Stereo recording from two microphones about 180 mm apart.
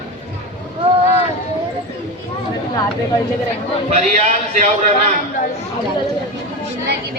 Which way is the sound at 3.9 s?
40° right (ahead or behind).